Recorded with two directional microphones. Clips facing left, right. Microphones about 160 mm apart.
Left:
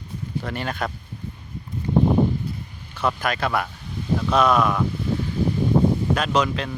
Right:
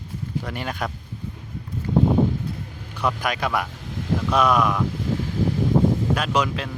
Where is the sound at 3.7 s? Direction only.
90° right.